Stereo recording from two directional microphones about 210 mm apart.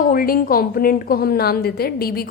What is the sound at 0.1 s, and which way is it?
A woman's voice, 45° left (ahead or behind).